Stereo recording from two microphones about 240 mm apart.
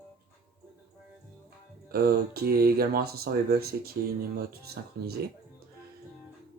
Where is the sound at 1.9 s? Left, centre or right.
Right.